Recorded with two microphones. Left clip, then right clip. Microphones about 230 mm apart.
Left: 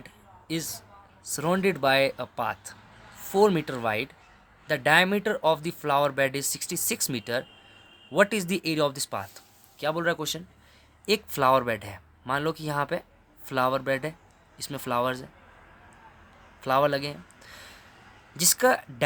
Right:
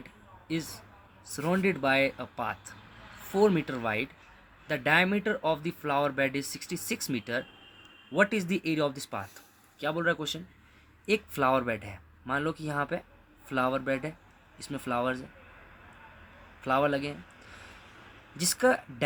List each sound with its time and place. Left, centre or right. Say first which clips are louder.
0.4 s speech: left 2 dB; left
16.6 s speech: left 4 dB; left
18.3 s speech: left 3 dB; left